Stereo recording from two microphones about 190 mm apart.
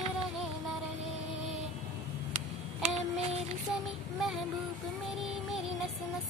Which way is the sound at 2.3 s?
35° right (ahead or behind).